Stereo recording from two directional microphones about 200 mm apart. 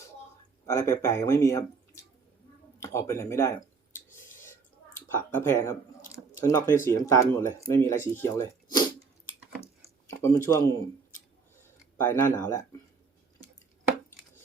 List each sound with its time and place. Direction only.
0.6 s speech: 15° left (ahead or behind)
2.8 s a sound: 15° left (ahead or behind)
5.1 s speech: 10° left (ahead or behind)
10.1 s speech: 15° left (ahead or behind)
11.6 s speech: 10° left (ahead or behind)